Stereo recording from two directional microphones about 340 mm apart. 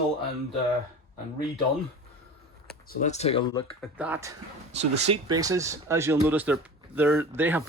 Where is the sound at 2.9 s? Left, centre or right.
Left.